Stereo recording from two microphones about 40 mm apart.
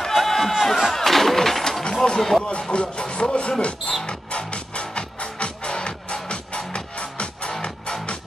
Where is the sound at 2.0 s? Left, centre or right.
Centre.